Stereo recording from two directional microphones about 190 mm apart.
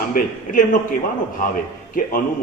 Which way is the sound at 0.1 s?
45° left (ahead or behind).